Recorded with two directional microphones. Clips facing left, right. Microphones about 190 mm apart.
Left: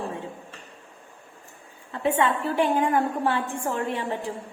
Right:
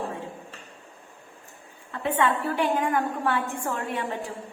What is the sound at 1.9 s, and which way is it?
A woman's voice, 20° left (ahead or behind).